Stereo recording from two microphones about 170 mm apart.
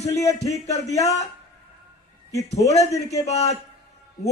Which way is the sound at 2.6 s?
20° left (ahead or behind).